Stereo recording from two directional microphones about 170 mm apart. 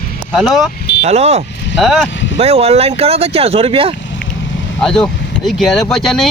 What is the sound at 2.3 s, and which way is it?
Speech, 35° right (ahead or behind).